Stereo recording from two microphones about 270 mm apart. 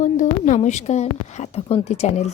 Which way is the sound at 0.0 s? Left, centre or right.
Left.